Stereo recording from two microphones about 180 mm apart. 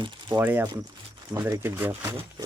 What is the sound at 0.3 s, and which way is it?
Speech, 10° right (ahead or behind).